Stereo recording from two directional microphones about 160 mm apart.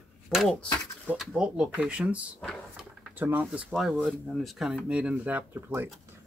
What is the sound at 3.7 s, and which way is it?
Speech, centre (ahead or behind).